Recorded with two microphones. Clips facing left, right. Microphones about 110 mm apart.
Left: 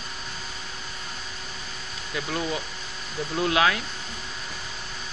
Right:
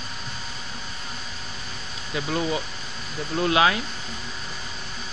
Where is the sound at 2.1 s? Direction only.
5° right (ahead or behind).